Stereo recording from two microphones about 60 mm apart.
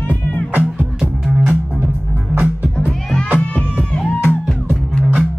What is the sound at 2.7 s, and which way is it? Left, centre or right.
Music, centre.